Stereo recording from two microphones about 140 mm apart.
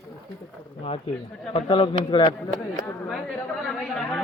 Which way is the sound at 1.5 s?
40° left (ahead or behind).